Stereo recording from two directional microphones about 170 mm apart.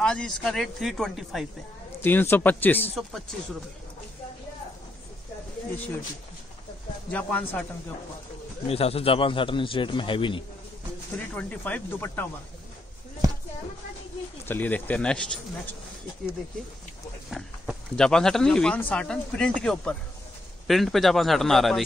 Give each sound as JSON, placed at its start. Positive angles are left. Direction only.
{"t": 0.0, "sound": "speech", "side_deg": 5}
{"t": 2.0, "sound": "speech", "side_deg": 15}
{"t": 7.1, "sound": "speech", "side_deg": 10}
{"t": 8.6, "sound": "a man's voice", "side_deg": 35}
{"t": 11.3, "sound": "speech", "side_deg": 10}
{"t": 14.4, "sound": "speech", "side_deg": 10}
{"t": 17.3, "sound": "speech", "side_deg": 0}